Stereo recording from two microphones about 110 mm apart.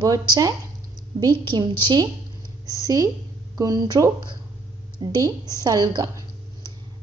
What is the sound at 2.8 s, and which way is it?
A woman's voice, 30° right (ahead or behind).